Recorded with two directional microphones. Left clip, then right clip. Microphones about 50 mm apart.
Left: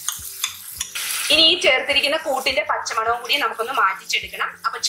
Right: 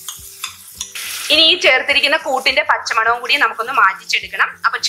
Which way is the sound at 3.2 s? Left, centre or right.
Right.